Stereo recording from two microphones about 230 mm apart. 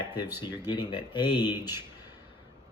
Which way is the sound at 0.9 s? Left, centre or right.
Centre.